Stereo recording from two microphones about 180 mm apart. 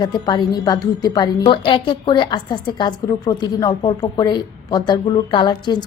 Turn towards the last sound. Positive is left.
turn(degrees=25)  # may be behind; listen again after turning